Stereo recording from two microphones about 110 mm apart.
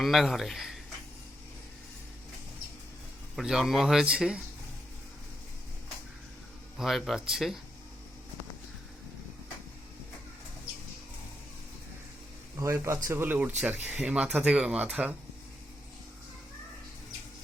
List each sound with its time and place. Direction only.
0.0 s a man's voice: centre (ahead or behind)
3.3 s a man's voice: 5° right (ahead or behind)
6.7 s a man's voice: centre (ahead or behind)
12.5 s speech: 25° right (ahead or behind); by 15.1 s 5° right (ahead or behind)